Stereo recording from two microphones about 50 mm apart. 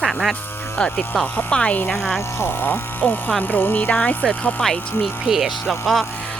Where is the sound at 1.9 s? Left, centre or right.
Centre.